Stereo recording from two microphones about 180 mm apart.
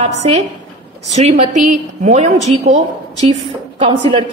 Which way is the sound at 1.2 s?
45° right (ahead or behind).